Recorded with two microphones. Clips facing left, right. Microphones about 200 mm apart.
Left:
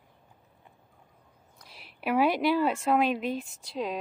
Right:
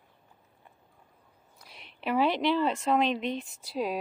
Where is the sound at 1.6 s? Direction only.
5° left (ahead or behind).